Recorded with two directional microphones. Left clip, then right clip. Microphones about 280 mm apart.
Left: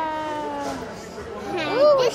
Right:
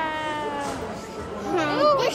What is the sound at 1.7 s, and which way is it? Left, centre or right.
Speech, centre.